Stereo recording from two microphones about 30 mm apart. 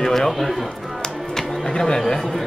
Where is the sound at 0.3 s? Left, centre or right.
Centre.